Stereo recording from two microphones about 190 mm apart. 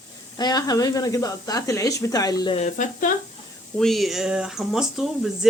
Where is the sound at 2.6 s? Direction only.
40° left (ahead or behind).